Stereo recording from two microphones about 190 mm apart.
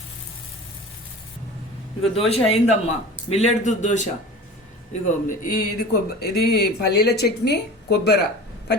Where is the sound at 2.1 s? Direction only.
30° left (ahead or behind); by 7.6 s 60° left (ahead or behind).